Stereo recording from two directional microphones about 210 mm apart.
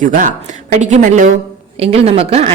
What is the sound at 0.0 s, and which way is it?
Speech, 40° right (ahead or behind).